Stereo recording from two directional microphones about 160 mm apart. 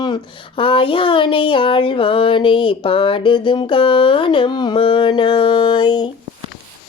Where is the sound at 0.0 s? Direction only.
30° left (ahead or behind).